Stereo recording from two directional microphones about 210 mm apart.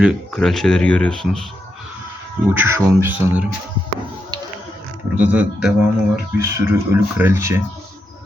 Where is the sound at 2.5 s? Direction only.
10° right (ahead or behind).